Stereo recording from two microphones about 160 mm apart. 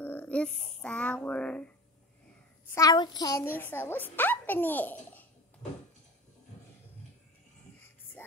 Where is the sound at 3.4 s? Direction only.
15° left (ahead or behind).